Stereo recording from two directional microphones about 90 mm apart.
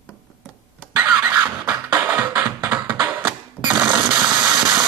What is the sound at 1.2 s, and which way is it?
Music, 20° right (ahead or behind).